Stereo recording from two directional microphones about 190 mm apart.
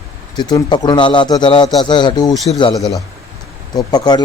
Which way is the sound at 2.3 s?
Centre (ahead or behind).